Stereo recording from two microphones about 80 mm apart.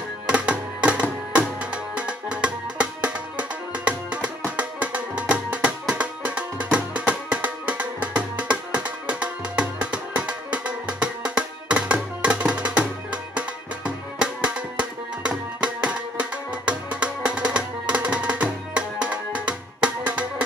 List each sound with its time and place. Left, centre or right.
0.3 s music: centre